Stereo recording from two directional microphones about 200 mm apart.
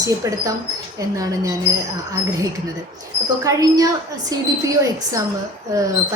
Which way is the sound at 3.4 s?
15° right (ahead or behind).